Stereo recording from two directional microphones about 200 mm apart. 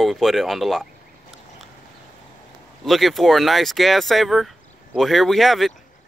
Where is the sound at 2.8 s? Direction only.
Centre (ahead or behind).